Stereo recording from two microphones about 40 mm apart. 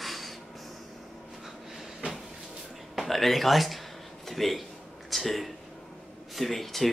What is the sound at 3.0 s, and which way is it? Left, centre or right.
Speech, centre.